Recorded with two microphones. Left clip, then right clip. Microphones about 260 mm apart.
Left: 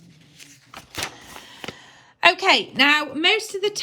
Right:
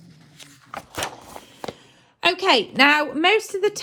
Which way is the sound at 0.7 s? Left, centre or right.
Centre.